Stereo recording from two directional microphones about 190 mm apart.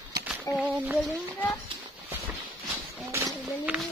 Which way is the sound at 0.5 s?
15° left (ahead or behind).